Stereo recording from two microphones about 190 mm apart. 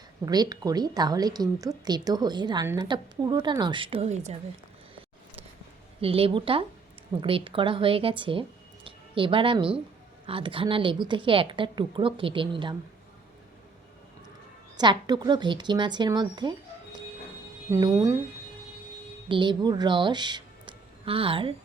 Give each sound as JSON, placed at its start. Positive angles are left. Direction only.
{"t": 0.3, "sound": "speech", "side_deg": -20}
{"t": 6.0, "sound": "speech", "side_deg": -30}
{"t": 14.8, "sound": "speech", "side_deg": -20}
{"t": 19.3, "sound": "speech", "side_deg": -25}